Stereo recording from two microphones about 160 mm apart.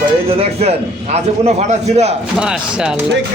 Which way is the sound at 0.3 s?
40° right (ahead or behind).